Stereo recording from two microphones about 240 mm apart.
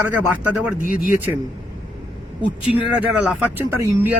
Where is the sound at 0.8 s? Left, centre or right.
Left.